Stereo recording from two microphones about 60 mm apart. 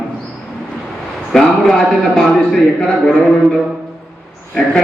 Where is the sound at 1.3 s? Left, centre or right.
Centre.